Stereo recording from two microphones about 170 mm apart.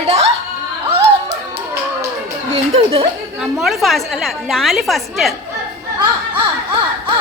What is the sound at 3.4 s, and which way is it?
A woman's voice, centre (ahead or behind).